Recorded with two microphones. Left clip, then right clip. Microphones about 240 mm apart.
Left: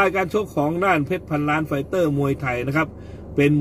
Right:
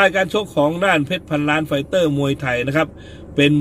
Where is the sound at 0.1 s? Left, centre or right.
Centre.